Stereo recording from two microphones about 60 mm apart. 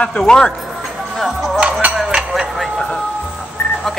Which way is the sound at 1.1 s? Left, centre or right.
Centre.